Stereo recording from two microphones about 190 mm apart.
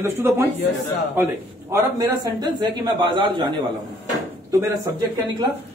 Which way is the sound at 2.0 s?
20° right (ahead or behind).